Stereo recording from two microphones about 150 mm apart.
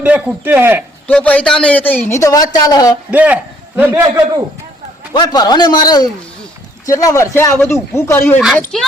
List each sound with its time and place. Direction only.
0.0 s a man's voice: 10° right (ahead or behind)
1.0 s a man's voice: 10° left (ahead or behind)
3.1 s a man's voice: 10° right (ahead or behind)
4.0 s a man's voice: 20° right (ahead or behind)
5.1 s a man's voice: 30° left (ahead or behind)
8.7 s a child's voice: 5° left (ahead or behind)